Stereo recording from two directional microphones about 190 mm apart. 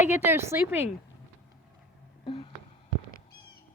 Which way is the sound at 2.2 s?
25° left (ahead or behind).